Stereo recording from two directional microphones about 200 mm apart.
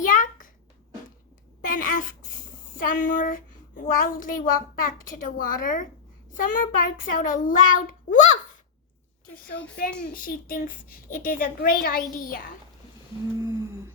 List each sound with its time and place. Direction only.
0.0 s a sound: 40° left (ahead or behind)
1.6 s a woman's voice: 40° left (ahead or behind)
10.1 s speech: 45° left (ahead or behind)
13.4 s humming: 15° right (ahead or behind)